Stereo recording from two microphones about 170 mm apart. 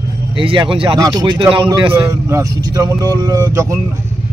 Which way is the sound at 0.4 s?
30° right (ahead or behind).